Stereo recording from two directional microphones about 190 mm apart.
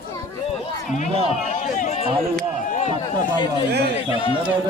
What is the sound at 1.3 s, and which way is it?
Speech, 40° left (ahead or behind).